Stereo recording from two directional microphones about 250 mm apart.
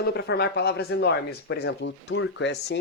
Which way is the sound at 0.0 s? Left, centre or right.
Left.